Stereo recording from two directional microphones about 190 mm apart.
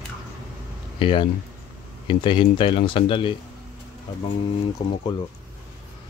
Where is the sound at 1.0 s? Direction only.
25° left (ahead or behind).